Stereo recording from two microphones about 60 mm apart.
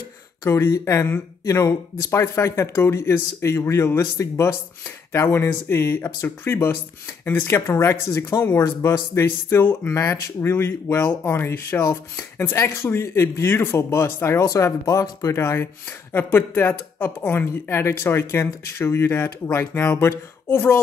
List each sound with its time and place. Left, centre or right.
0.5 s speech: left
1.4 s speech: left
5.1 s speech: left
11.8 s speech: left
12.5 s speech: left
14.4 s speech: left
16.1 s speech: left
17.5 s speech: left